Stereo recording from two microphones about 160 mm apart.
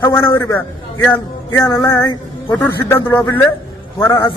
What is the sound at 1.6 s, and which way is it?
Music, 20° left (ahead or behind).